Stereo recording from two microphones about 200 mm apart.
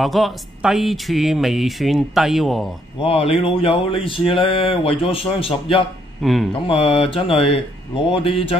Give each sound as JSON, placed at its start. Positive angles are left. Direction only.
{"t": 0.0, "sound": "speech", "side_deg": 0}
{"t": 3.0, "sound": "speech", "side_deg": 30}
{"t": 6.2, "sound": "speech", "side_deg": 0}
{"t": 6.7, "sound": "speech", "side_deg": 30}